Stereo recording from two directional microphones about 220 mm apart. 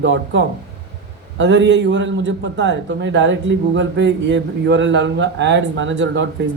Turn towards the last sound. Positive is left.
turn(degrees=-55)  # may be behind; listen again after turning